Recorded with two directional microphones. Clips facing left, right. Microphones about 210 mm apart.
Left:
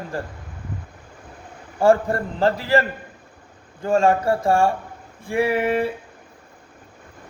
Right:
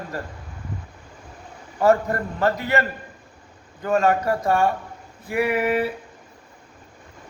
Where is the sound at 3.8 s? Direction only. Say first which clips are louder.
Left 2 dB; 30° left (ahead or behind).